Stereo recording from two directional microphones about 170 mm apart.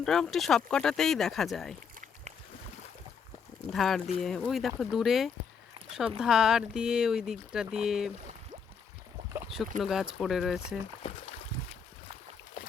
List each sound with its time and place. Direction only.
0.0 s speech: 5° left (ahead or behind)
3.7 s speech: centre (ahead or behind)
9.8 s speech: centre (ahead or behind)
11.0 s boat: 40° left (ahead or behind)